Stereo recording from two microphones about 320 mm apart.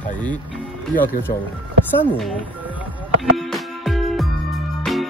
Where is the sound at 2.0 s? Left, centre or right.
Centre.